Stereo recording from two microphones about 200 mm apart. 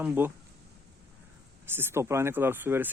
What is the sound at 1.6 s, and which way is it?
Speech, 10° right (ahead or behind).